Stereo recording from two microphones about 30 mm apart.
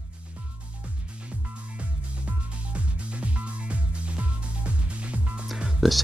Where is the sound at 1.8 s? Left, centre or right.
Right.